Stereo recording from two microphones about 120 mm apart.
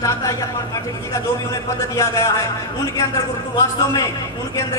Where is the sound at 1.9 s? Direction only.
25° left (ahead or behind).